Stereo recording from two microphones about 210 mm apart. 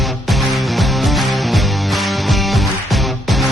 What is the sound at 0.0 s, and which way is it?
Music, centre (ahead or behind).